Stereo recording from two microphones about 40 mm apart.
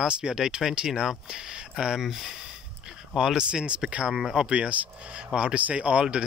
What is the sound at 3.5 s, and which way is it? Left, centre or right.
Speech, right.